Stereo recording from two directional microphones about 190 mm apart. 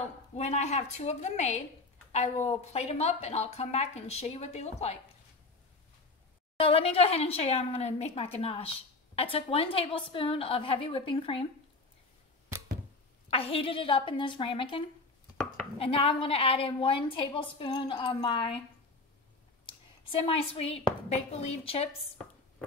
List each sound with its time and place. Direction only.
0.4 s a woman's voice: 35° left (ahead or behind)
6.6 s a woman's voice: 30° left (ahead or behind)
13.3 s a woman's voice: 30° left (ahead or behind)
20.1 s a woman's voice: 30° left (ahead or behind)